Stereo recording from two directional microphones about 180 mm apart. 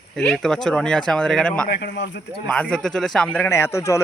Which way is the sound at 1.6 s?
65° left (ahead or behind).